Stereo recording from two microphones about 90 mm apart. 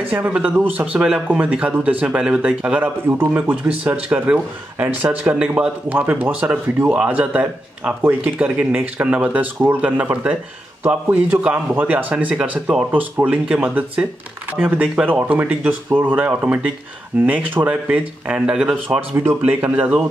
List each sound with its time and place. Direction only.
0.0 s speech: 15° right (ahead or behind)
19.1 s speech: 25° right (ahead or behind)